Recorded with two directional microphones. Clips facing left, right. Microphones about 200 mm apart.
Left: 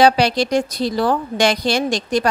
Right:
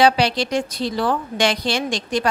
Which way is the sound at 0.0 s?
45° left (ahead or behind).